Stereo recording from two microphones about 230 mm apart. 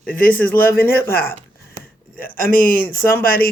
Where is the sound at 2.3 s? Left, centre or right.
Left.